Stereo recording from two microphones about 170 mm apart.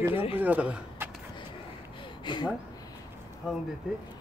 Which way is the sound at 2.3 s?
25° left (ahead or behind).